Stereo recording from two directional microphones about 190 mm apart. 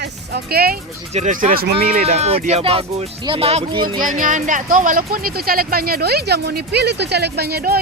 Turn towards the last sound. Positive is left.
turn(degrees=-55)  # may be behind; listen again after turning